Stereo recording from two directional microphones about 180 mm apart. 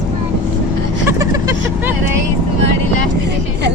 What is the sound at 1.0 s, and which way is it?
Vehicle, 20° right (ahead or behind).